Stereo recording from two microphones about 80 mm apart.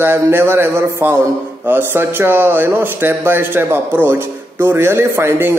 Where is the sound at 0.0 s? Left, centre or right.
Right.